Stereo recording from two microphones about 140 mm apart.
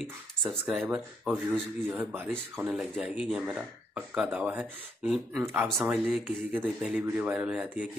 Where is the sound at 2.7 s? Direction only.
Centre (ahead or behind).